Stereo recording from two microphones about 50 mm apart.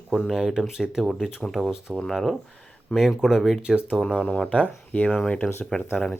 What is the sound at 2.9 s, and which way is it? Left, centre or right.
Speech, centre.